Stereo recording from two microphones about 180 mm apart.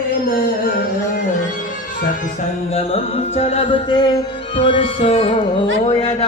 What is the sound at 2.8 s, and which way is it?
Music, 35° left (ahead or behind).